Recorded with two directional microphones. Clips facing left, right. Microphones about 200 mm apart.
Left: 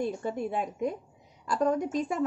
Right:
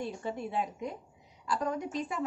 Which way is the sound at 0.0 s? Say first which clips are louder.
Left 5 dB; 45° left (ahead or behind).